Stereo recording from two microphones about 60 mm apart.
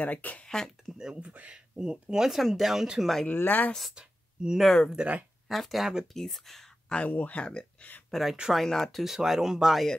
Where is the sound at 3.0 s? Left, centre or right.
Centre.